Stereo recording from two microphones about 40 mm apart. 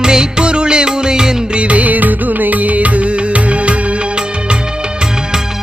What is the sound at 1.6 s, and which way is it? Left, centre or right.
Music, right.